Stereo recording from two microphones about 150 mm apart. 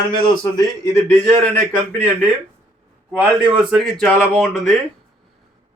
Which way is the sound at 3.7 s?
Centre (ahead or behind).